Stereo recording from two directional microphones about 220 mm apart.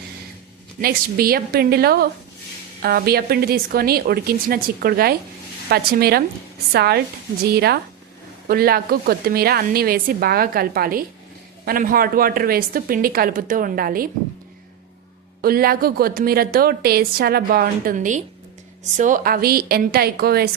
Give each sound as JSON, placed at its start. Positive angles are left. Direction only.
{"t": 0.8, "sound": "a woman's voice", "side_deg": -45}
{"t": 15.4, "sound": "a woman's voice", "side_deg": -45}